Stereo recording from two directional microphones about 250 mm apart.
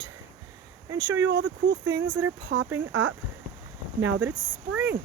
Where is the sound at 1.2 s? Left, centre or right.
Right.